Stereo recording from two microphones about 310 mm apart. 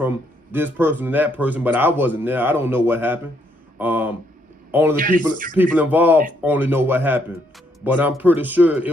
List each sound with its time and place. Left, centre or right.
0.5 s speech: centre
3.8 s a sound: centre
4.7 s a man's voice: centre
4.9 s speech: right
5.6 s speech: centre